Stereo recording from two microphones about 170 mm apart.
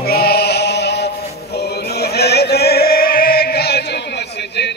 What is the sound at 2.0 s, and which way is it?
Chant, 70° left (ahead or behind).